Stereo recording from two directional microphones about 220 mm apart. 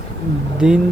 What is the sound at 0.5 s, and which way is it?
Speech, 5° right (ahead or behind).